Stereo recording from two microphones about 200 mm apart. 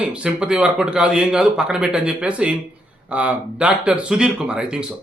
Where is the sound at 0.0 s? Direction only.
5° right (ahead or behind).